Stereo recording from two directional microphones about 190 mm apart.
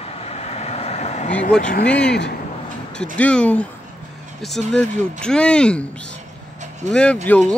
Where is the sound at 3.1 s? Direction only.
5° left (ahead or behind).